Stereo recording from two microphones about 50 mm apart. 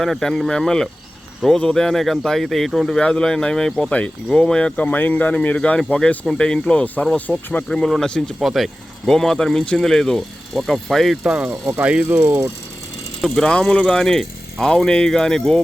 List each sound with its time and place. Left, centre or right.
0.0 s speech: centre
3.0 s speech: centre
4.8 s speech: left; by 8.0 s centre
8.4 s speech: centre
11.2 s speech: right
13.4 s speech: centre